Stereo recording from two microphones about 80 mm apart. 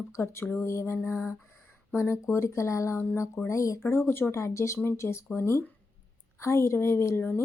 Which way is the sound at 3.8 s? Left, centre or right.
Left.